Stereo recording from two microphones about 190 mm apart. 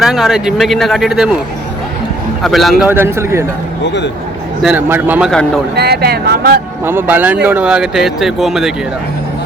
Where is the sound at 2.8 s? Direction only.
10° right (ahead or behind).